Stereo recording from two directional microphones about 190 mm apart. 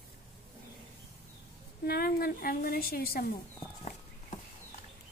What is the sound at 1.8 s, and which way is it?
A woman's voice, 55° left (ahead or behind).